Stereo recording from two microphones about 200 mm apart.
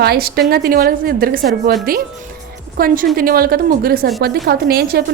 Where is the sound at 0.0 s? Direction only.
50° right (ahead or behind).